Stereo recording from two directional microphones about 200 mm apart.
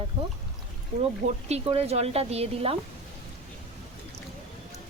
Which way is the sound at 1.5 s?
30° right (ahead or behind).